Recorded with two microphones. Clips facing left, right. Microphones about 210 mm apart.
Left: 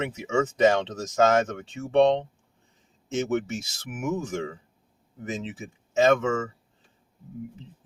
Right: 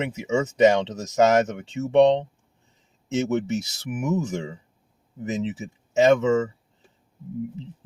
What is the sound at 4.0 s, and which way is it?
Speech, 15° right (ahead or behind).